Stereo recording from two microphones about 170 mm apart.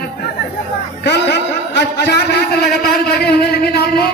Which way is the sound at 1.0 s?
90° left.